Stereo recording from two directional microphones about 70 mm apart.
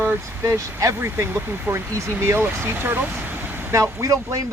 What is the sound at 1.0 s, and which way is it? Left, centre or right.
Speech, right.